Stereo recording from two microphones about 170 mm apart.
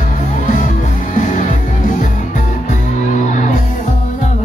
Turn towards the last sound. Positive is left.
turn(degrees=45)  # may be behind; listen again after turning